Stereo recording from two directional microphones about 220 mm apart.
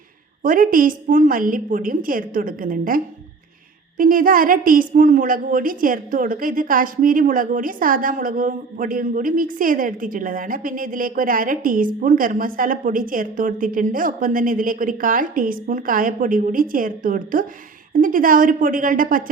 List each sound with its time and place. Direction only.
0.4 s a woman's voice: 40° right (ahead or behind)